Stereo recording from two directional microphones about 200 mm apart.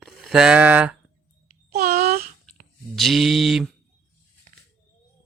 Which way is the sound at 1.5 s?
45° right (ahead or behind).